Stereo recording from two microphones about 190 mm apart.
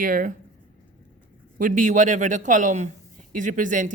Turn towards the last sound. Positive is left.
turn(degrees=-45)  # may be behind; listen again after turning